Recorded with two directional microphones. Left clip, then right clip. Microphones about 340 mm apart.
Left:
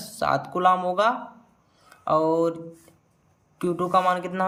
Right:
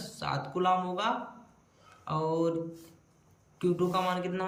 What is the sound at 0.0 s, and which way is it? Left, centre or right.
Speech, centre.